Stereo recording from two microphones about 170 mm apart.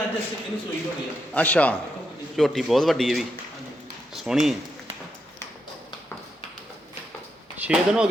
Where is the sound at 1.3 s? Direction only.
10° left (ahead or behind).